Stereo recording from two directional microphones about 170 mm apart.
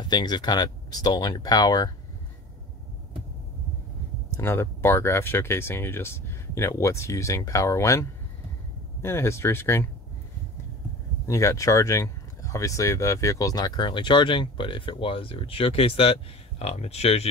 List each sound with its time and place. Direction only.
0.1 s speech: 25° left (ahead or behind)
4.4 s speech: 15° left (ahead or behind)
11.2 s speech: 20° left (ahead or behind); by 17.3 s 40° left (ahead or behind)